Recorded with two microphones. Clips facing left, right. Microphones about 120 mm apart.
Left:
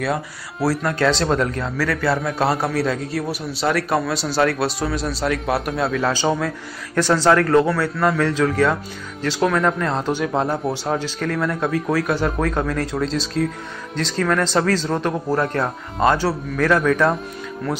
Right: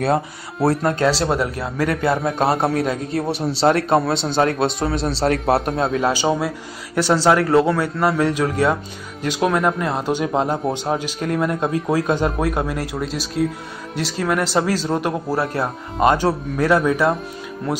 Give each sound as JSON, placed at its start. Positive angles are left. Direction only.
{"t": 0.7, "sound": "a man's voice", "side_deg": -20}
{"t": 1.1, "sound": "a man's voice", "side_deg": -10}